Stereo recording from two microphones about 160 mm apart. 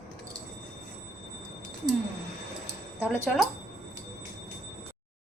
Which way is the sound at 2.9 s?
10° right (ahead or behind).